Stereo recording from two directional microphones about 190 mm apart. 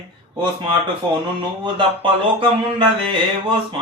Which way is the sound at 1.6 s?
25° right (ahead or behind).